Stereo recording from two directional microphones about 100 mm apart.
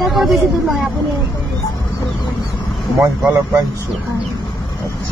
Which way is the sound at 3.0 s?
30° right (ahead or behind).